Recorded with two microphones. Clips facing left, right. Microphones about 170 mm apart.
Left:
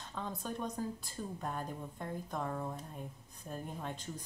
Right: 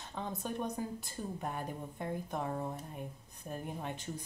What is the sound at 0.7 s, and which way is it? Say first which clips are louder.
A woman's voice: even; 10° right (ahead or behind).